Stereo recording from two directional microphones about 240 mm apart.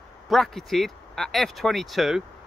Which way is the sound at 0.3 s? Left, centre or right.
Centre.